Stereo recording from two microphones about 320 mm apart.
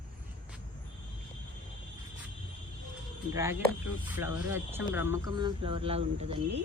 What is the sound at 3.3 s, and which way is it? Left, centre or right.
Speech, centre.